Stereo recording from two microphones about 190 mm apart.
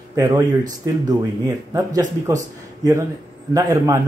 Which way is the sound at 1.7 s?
20° right (ahead or behind).